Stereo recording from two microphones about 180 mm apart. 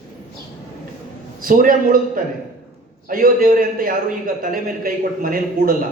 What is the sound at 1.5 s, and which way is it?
A man's voice, 50° right (ahead or behind).